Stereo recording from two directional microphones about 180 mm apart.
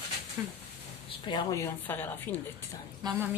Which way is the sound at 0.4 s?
20° right (ahead or behind).